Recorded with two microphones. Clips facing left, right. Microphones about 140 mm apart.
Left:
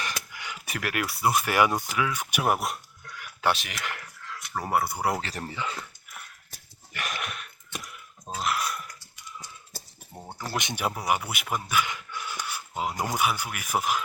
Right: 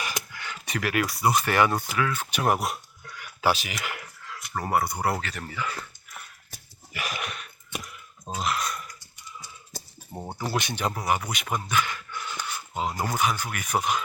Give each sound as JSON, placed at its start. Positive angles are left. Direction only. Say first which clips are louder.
{"t": 0.3, "sound": "speech", "louder": "right 2 dB", "side_deg": 15}
{"t": 5.2, "sound": "speech", "louder": "even", "side_deg": 30}
{"t": 5.8, "sound": "a sound", "louder": "right 1 dB", "side_deg": 0}
{"t": 9.7, "sound": "a sound", "louder": "right 8 dB", "side_deg": -20}
{"t": 10.6, "sound": "speech", "louder": "right 1 dB", "side_deg": 20}
{"t": 10.8, "sound": "speech", "louder": "left 1 dB", "side_deg": 10}